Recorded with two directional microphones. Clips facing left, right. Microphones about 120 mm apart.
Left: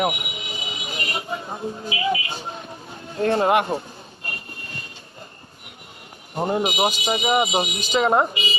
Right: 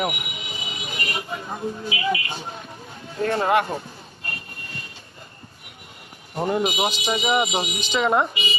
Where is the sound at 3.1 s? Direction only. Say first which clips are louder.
Left 2 dB; 30° left (ahead or behind).